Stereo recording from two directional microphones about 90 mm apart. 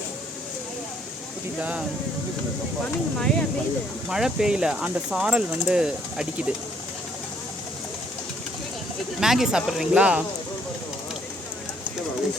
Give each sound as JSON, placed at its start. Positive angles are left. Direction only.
{"t": 1.5, "sound": "speech", "side_deg": -15}
{"t": 3.2, "sound": "speech", "side_deg": 10}
{"t": 4.1, "sound": "speech", "side_deg": -5}
{"t": 9.2, "sound": "speech", "side_deg": -5}